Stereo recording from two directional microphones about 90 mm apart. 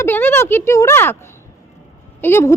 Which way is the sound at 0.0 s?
25° left (ahead or behind).